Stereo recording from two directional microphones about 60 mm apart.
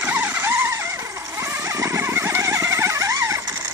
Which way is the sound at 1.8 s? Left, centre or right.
Right.